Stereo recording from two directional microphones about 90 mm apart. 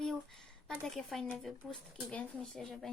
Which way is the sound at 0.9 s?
5° left (ahead or behind).